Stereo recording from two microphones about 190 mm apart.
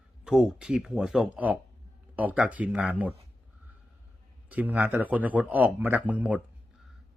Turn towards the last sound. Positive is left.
turn(degrees=-5)  # may be behind; listen again after turning